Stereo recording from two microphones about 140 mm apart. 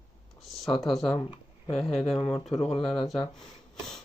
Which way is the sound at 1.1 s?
40° left (ahead or behind).